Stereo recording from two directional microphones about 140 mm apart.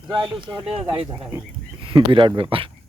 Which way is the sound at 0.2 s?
35° right (ahead or behind).